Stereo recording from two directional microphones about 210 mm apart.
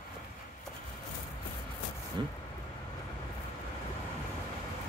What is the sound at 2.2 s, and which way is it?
Speech, 20° right (ahead or behind).